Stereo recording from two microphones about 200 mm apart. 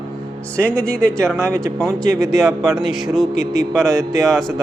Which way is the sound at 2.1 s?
15° right (ahead or behind).